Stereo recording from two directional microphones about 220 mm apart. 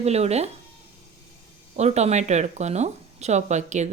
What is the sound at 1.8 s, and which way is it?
Speech, 30° right (ahead or behind).